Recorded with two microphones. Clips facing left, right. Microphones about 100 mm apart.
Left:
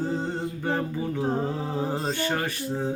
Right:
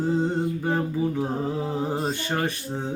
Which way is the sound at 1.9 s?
20° right (ahead or behind).